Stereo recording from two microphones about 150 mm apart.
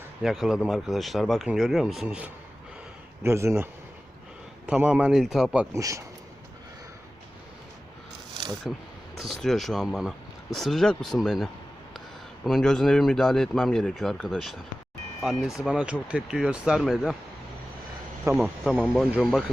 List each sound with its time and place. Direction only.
0.2 s speech: 5° right (ahead or behind)
5.7 s speech: 20° right (ahead or behind)
8.7 s speech: centre (ahead or behind)
12.5 s speech: 5° left (ahead or behind)
18.3 s speech: 5° right (ahead or behind)